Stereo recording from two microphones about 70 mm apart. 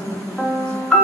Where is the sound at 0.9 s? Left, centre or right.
Centre.